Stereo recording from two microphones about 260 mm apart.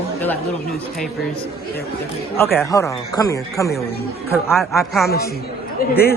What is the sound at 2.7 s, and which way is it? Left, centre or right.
A man's voice, centre.